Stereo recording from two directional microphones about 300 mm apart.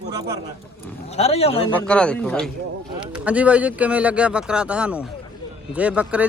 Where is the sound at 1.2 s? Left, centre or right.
Centre.